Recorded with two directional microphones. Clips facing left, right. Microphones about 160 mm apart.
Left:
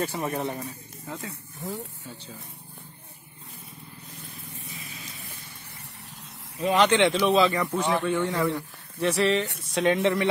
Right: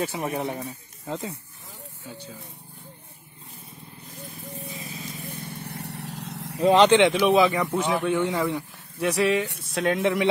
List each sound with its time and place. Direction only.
0.1 s speech: 15° right (ahead or behind)
1.6 s speech: 75° left (ahead or behind)
4.6 s vehicle: 35° right (ahead or behind)
5.3 s vehicle: 60° right (ahead or behind); by 6.6 s 80° right
6.6 s speech: 30° right (ahead or behind)
7.2 s a man's voice: 15° right (ahead or behind); by 10.1 s centre (ahead or behind)